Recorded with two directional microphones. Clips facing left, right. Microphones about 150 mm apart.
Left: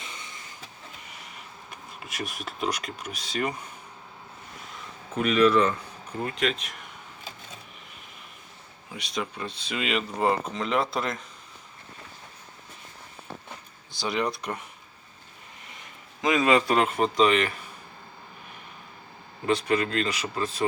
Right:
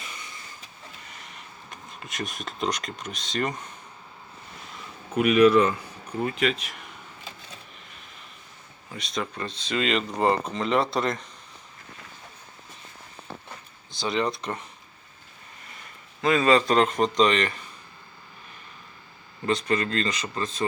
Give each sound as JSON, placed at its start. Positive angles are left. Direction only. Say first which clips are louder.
{"t": 0.0, "sound": "train", "louder": "even", "side_deg": 25}
{"t": 1.7, "sound": "speech", "louder": "right 1 dB", "side_deg": 5}
{"t": 5.1, "sound": "speech", "louder": "right 3 dB", "side_deg": -10}
{"t": 9.1, "sound": "speech", "louder": "right 1 dB", "side_deg": 5}
{"t": 14.4, "sound": "speech", "louder": "right 1 dB", "side_deg": 10}
{"t": 16.2, "sound": "speech", "louder": "right 1 dB", "side_deg": 15}
{"t": 19.5, "sound": "speech", "louder": "left 1 dB", "side_deg": 10}